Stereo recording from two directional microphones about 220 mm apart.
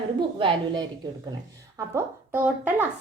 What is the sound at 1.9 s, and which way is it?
Speech, 10° right (ahead or behind).